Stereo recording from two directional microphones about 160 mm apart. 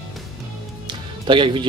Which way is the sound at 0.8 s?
30° right (ahead or behind).